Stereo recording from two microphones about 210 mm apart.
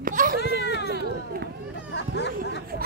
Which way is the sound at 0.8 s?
50° right (ahead or behind).